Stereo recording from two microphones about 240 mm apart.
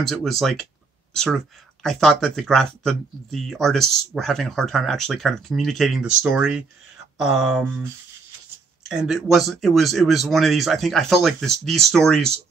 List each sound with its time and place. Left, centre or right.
0.0 s speech: centre